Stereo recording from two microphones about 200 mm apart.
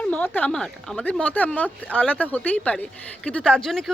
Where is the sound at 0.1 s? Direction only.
10° left (ahead or behind).